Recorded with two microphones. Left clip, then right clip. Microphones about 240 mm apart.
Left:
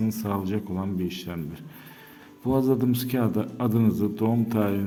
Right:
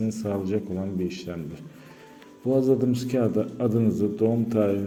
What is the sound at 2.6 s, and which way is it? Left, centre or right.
A man's voice, left.